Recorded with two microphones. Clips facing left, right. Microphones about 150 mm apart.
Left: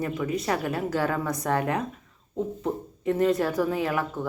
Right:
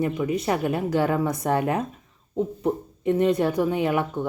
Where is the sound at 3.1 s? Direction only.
20° right (ahead or behind).